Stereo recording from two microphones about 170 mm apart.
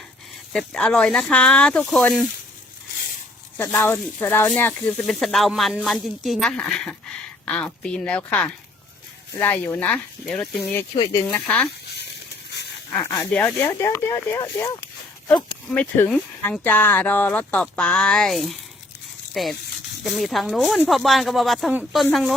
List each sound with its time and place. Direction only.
0.5 s speech: 5° left (ahead or behind)
3.6 s speech: 10° left (ahead or behind)
10.9 s speech: 25° left (ahead or behind)
11.3 s speech: 10° left (ahead or behind)
12.9 s speech: 15° left (ahead or behind)
15.7 s speech: 10° left (ahead or behind)